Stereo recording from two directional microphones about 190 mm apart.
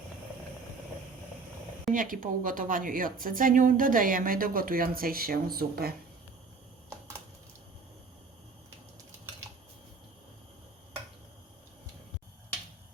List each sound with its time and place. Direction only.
1.9 s a woman's voice: 45° right (ahead or behind)